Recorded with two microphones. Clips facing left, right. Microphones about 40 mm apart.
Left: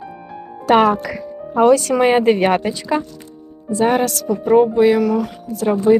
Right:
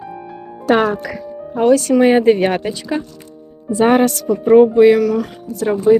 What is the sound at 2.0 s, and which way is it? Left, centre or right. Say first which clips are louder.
Speech: right 2 dB; left.